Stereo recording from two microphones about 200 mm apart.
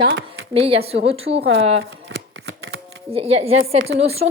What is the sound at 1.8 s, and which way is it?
Shuffling cards, 85° right.